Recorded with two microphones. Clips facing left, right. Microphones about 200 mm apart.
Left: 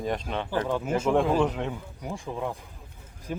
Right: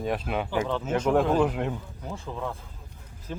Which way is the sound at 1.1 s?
Centre (ahead or behind).